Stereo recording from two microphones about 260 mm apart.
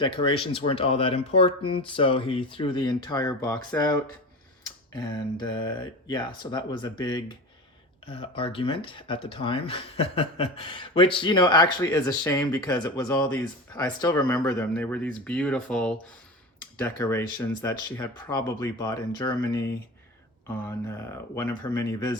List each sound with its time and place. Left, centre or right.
0.0 s speech: centre
4.9 s speech: centre
20.7 s speech: centre